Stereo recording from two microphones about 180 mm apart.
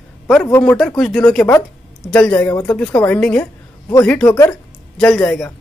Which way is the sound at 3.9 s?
15° left (ahead or behind).